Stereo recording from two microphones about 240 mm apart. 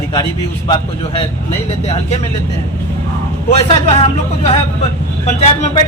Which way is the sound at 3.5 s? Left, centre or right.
Left.